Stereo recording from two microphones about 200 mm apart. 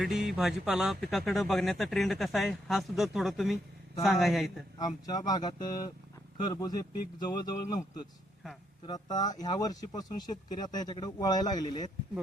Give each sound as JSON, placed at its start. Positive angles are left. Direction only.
{"t": 0.0, "sound": "speech", "side_deg": 0}
{"t": 4.8, "sound": "speech", "side_deg": 20}
{"t": 8.9, "sound": "speech", "side_deg": 20}